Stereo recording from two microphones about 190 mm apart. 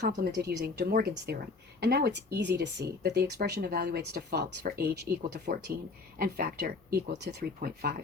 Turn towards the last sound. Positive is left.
turn(degrees=-50)  # may be behind; listen again after turning